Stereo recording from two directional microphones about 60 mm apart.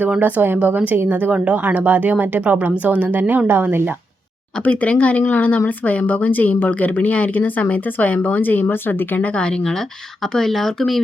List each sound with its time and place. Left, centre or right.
0.2 s speech: right
4.6 s speech: left
10.3 s speech: centre